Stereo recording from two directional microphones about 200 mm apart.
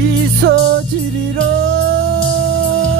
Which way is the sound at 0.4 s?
50° right (ahead or behind).